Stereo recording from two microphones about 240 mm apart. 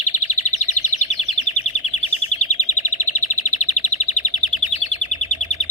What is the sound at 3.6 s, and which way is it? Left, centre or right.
Chirp, left.